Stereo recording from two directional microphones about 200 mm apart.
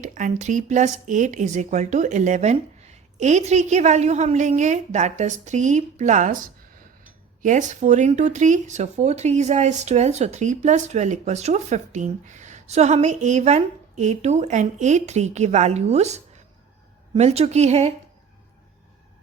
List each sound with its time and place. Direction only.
0.0 s speech: 40° right (ahead or behind)